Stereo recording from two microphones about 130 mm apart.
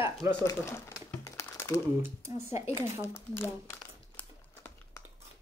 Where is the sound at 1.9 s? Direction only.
20° right (ahead or behind).